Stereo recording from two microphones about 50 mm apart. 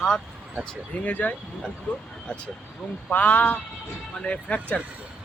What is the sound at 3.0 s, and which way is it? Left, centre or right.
Speech, left.